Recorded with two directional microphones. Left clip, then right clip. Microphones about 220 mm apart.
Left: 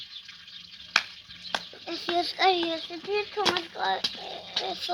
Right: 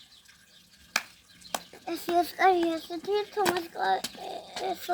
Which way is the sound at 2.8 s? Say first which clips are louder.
Right 1 dB; 20° right (ahead or behind).